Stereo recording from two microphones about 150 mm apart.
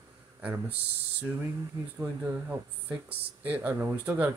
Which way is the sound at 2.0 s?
10° right (ahead or behind).